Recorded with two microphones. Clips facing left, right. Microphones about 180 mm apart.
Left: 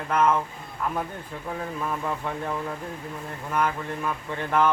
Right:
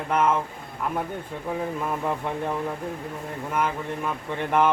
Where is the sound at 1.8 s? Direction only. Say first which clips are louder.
Right 2 dB; 20° right (ahead or behind).